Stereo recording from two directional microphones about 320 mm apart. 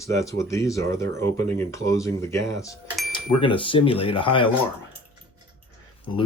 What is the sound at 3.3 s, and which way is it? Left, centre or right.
Speech, centre.